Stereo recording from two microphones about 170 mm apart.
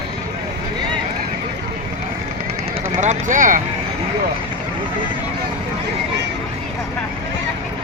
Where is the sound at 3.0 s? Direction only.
45° right (ahead or behind).